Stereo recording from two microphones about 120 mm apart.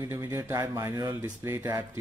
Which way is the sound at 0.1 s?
25° right (ahead or behind).